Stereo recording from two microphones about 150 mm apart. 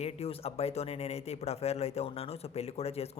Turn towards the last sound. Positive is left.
turn(degrees=45)  # may be behind; listen again after turning